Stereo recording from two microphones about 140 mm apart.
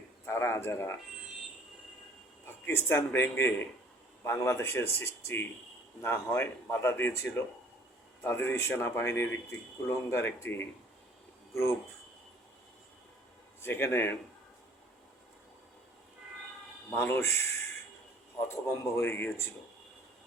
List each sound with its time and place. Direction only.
0.3 s speech: 20° left (ahead or behind)
2.6 s speech: 15° left (ahead or behind)
13.6 s speech: 15° left (ahead or behind)
16.9 s speech: 15° left (ahead or behind)